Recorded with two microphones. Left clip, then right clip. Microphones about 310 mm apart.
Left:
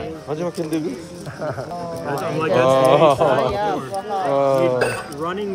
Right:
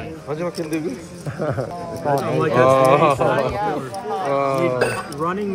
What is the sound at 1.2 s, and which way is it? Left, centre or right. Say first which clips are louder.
Speech: right 3 dB; right.